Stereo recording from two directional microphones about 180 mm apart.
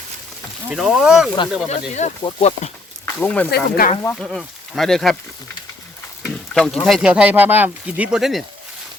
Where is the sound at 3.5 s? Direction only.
55° left (ahead or behind).